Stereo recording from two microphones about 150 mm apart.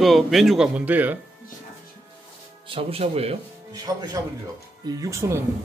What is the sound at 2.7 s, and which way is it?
Speech, 40° right (ahead or behind).